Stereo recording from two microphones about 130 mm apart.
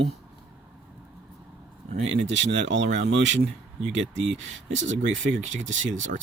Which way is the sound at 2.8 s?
65° right (ahead or behind).